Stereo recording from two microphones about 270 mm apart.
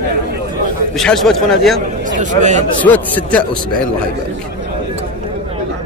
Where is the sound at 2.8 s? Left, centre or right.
Centre.